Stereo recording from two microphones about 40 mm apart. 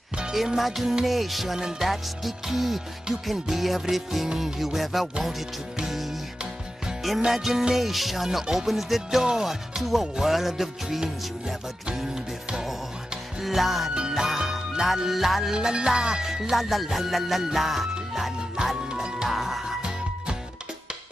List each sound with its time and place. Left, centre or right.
0.6 s music: centre
7.2 s music: centre
9.2 s music: centre
9.5 s music: centre
13.4 s music: centre
13.9 s music: centre
15.5 s music: centre